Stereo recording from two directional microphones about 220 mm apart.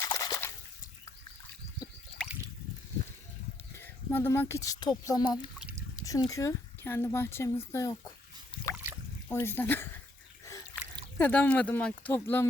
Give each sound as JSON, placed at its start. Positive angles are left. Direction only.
{"t": 0.0, "sound": "water", "side_deg": 15}
{"t": 2.2, "sound": "drip", "side_deg": 5}
{"t": 3.8, "sound": "speech", "side_deg": 10}
{"t": 5.3, "sound": "speech", "side_deg": -5}
{"t": 6.0, "sound": "a sound", "side_deg": 15}
{"t": 6.3, "sound": "speech", "side_deg": 10}
{"t": 8.7, "sound": "a sound", "side_deg": -10}
{"t": 9.3, "sound": "speech", "side_deg": 10}
{"t": 10.4, "sound": "a sound", "side_deg": 15}
{"t": 11.2, "sound": "speech", "side_deg": 5}